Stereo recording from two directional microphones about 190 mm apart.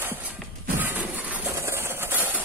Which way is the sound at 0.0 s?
10° right (ahead or behind).